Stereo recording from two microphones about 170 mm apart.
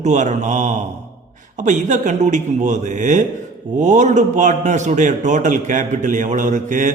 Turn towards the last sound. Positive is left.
turn(degrees=-50)  # may be behind; listen again after turning